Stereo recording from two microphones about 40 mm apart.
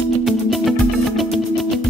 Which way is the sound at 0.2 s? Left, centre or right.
Centre.